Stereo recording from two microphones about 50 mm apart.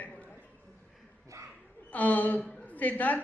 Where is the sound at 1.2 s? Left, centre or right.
Right.